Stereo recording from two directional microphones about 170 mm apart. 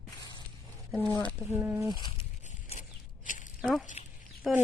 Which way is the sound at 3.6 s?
Centre (ahead or behind).